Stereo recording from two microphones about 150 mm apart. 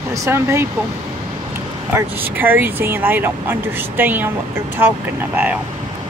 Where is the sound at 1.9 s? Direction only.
15° right (ahead or behind).